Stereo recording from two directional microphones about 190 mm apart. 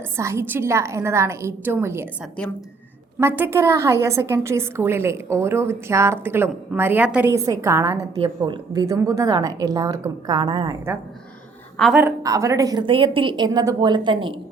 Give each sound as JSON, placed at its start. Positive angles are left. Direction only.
{"t": 0.2, "sound": "a woman's voice", "side_deg": -15}
{"t": 3.2, "sound": "a woman's voice", "side_deg": -10}
{"t": 7.9, "sound": "a woman's voice", "side_deg": -30}
{"t": 11.8, "sound": "a woman's voice", "side_deg": -5}
{"t": 12.2, "sound": "a woman's voice", "side_deg": -15}